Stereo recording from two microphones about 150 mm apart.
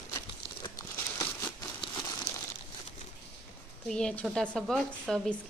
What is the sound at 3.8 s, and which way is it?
Speech, 5° left (ahead or behind).